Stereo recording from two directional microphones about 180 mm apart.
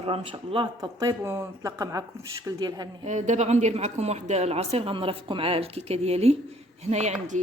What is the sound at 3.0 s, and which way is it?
Speech, 40° right (ahead or behind).